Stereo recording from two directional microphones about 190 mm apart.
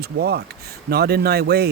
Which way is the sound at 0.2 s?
60° right (ahead or behind).